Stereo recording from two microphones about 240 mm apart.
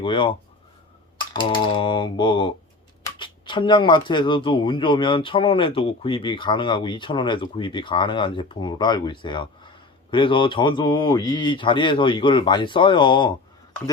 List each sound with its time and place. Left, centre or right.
0.0 s speech: left